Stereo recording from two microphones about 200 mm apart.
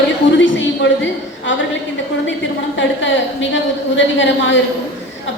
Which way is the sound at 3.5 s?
70° left (ahead or behind).